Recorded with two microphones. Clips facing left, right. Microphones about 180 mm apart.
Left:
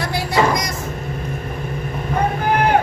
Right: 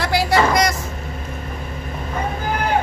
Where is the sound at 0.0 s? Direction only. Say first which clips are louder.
Right 1 dB; 85° right.